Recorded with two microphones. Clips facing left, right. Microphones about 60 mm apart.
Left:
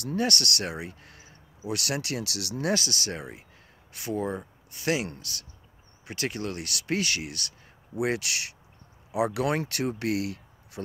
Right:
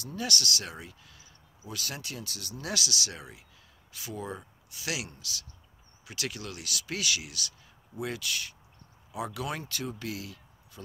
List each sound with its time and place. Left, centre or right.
0.0 s speech: left
1.7 s speech: left
2.6 s speech: left
7.9 s speech: left